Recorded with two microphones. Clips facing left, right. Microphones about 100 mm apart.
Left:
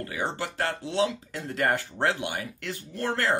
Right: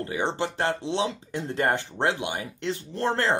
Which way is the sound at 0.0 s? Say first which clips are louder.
Right 4 dB; 25° right (ahead or behind).